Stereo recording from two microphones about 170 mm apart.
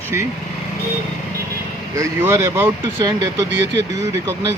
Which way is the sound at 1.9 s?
15° right (ahead or behind).